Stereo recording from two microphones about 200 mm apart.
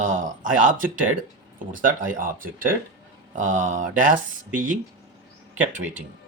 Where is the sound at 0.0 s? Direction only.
40° right (ahead or behind).